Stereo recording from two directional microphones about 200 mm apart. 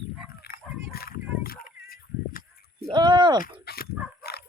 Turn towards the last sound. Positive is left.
turn(degrees=50)  # may be behind; listen again after turning